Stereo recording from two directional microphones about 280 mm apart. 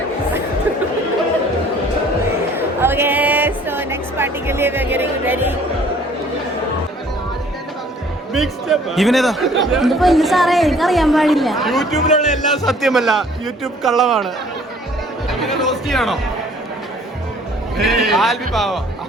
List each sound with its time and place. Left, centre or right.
2.6 s music: centre
8.3 s speech: centre
11.9 s a man's voice: left
12.6 s speech: centre
15.3 s speech: centre
17.7 s speech: centre